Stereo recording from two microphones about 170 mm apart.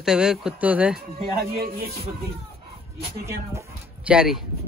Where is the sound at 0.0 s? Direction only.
5° right (ahead or behind).